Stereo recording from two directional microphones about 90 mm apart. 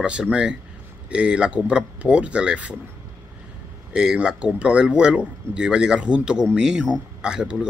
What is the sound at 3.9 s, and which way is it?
Speech, 10° right (ahead or behind).